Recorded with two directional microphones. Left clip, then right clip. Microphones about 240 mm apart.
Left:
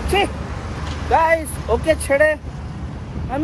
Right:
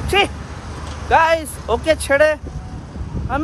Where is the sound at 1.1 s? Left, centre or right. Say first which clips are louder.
Right 2 dB; centre.